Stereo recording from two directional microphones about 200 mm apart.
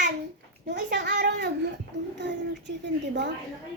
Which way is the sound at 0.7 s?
60° right (ahead or behind).